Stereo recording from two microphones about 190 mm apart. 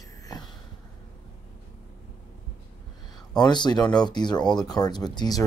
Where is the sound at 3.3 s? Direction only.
20° left (ahead or behind).